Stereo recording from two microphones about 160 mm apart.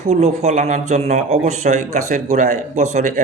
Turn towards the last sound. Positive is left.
turn(degrees=-50)  # may be behind; listen again after turning